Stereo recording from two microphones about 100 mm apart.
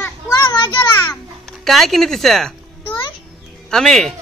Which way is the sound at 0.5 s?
50° left (ahead or behind).